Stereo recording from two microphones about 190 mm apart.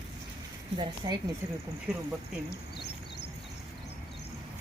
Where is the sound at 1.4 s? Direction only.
10° right (ahead or behind).